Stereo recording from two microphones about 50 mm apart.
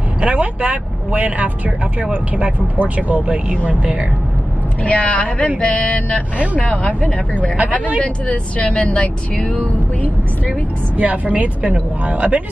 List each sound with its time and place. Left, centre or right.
0.2 s speech: right
4.8 s speech: left
11.0 s speech: right